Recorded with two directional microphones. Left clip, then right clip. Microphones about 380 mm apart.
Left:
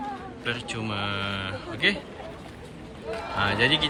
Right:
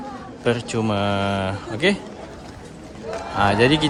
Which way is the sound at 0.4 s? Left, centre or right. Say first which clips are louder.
Right 9 dB; centre.